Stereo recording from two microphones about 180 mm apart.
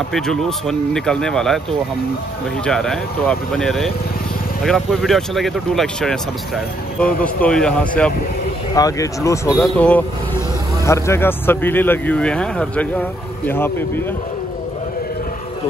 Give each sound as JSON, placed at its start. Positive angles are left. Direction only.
{"t": 0.1, "sound": "speech", "side_deg": 0}
{"t": 8.7, "sound": "speech", "side_deg": 20}